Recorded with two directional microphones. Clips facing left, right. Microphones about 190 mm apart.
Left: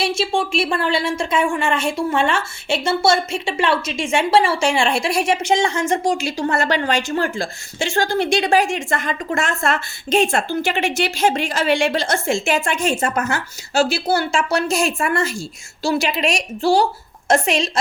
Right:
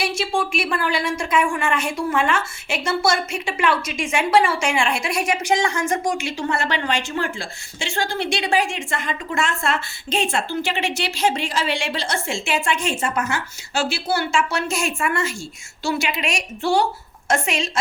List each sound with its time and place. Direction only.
0.0 s a woman's voice: 25° left (ahead or behind)